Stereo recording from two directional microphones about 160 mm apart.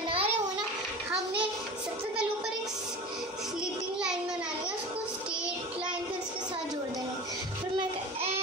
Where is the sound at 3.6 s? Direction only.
5° right (ahead or behind).